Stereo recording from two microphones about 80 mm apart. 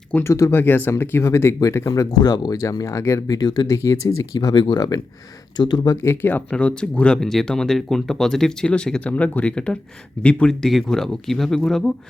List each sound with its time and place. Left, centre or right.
0.2 s speech: left
0.5 s speech: left
2.8 s speech: left
3.7 s speech: left
4.4 s speech: left
5.9 s speech: left
6.5 s speech: centre
10.6 s speech: centre